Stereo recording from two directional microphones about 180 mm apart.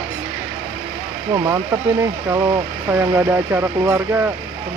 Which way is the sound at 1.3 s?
20° right (ahead or behind).